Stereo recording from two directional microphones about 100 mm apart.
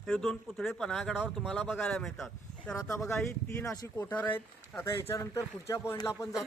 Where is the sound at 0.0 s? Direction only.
5° left (ahead or behind).